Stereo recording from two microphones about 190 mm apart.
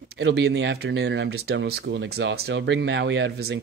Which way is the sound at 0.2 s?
60° right (ahead or behind).